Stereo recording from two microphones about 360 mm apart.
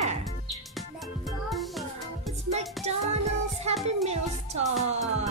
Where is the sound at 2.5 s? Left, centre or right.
Centre.